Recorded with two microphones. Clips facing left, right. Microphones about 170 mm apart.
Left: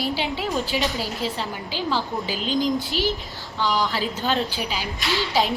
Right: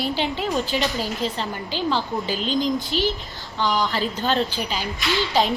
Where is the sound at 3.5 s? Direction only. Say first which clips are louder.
Right 1 dB; 20° right (ahead or behind).